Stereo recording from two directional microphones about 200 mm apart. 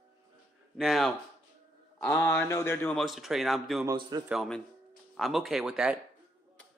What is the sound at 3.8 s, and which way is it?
Speech, 20° right (ahead or behind).